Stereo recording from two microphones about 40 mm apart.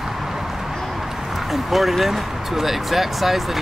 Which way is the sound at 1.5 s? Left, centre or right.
Centre.